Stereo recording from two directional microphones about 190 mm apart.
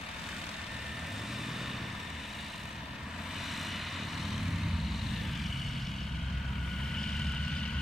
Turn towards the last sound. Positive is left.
turn(degrees=5)  # may be behind; listen again after turning